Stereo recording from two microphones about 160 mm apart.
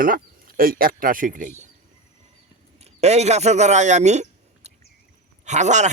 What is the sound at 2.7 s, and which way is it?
Speech, 45° right (ahead or behind).